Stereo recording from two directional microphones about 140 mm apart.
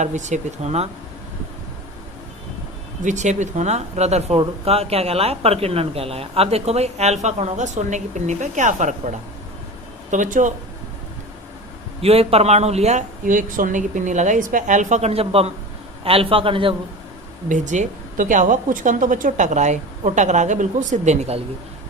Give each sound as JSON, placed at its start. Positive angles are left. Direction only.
{"t": 0.0, "sound": "a woman's voice", "side_deg": -55}
{"t": 3.0, "sound": "a woman's voice", "side_deg": -60}
{"t": 12.0, "sound": "a woman's voice", "side_deg": -45}
{"t": 17.5, "sound": "a woman's voice", "side_deg": -60}